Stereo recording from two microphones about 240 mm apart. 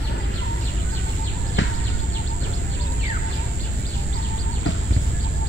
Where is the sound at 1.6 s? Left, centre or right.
Left.